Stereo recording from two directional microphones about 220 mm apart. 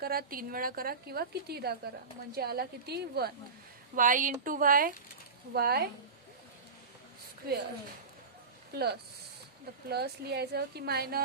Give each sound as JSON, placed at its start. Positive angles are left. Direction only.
{"t": 0.0, "sound": "a woman's voice", "side_deg": -45}
{"t": 8.7, "sound": "a woman's voice", "side_deg": -45}